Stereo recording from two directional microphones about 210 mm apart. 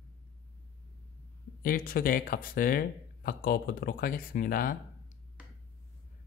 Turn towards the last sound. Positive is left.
turn(degrees=40)  # may be behind; listen again after turning